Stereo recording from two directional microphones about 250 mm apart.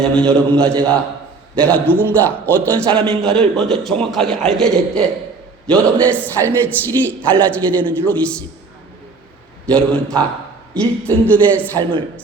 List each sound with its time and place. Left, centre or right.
0.0 s a man's voice: centre
9.6 s a man's voice: centre
11.8 s a woman's voice: centre